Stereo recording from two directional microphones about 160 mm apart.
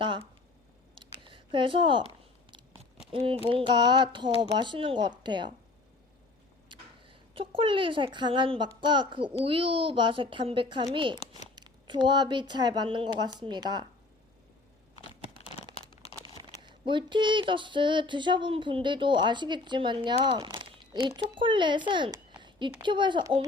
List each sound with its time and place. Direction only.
0.0 s a sound: 30° right (ahead or behind)
0.9 s scissors: 30° right (ahead or behind)
3.1 s speech: 35° right (ahead or behind)
6.7 s a child's voice: 35° right (ahead or behind)
15.4 s crumpling: 40° left (ahead or behind)
16.3 s speech: 25° right (ahead or behind)
20.2 s a sound: 30° right (ahead or behind)
21.3 s a child's voice: 30° right (ahead or behind)